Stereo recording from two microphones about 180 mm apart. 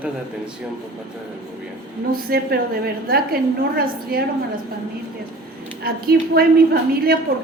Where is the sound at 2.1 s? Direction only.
60° right (ahead or behind).